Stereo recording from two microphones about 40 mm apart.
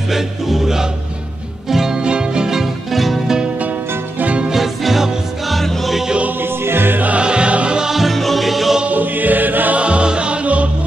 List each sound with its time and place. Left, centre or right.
0.1 s music: centre
4.5 s music: centre
6.4 s music: right
7.0 s music: right
7.2 s music: right
7.9 s music: centre
8.8 s music: right
9.8 s music: right